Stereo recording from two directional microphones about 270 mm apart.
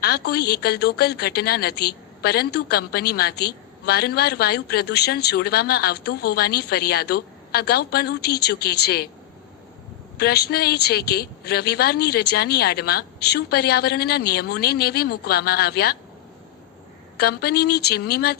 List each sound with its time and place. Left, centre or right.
0.3 s a woman's voice: left
10.2 s a woman's voice: left
17.2 s a woman's voice: left